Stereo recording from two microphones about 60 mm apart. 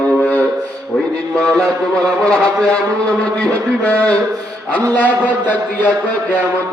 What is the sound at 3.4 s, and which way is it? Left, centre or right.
A man's voice, left.